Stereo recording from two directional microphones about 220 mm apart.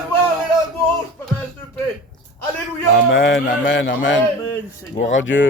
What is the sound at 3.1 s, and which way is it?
Speech, 60° left (ahead or behind).